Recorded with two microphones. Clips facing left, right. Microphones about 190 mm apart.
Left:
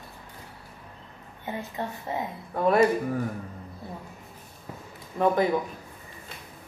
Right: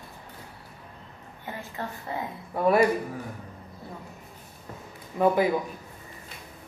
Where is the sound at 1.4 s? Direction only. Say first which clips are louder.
Left 3 dB; 20° left (ahead or behind).